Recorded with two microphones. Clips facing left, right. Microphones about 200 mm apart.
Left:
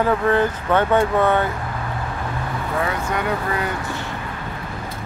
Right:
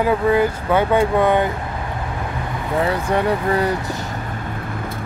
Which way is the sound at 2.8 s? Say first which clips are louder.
Right 5 dB; 30° right (ahead or behind).